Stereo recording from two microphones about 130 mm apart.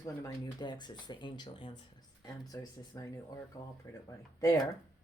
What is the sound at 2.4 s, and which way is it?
A woman's voice, 25° left (ahead or behind).